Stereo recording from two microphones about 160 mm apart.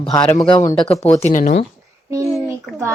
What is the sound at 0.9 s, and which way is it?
Speech, 40° left (ahead or behind).